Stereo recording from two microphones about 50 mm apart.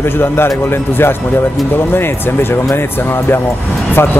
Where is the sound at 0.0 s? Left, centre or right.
Left.